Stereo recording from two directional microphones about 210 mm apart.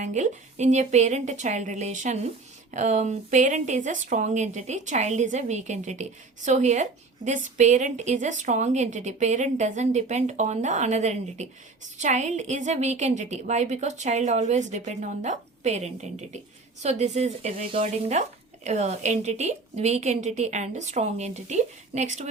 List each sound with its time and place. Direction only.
0.0 s speech: 35° right (ahead or behind)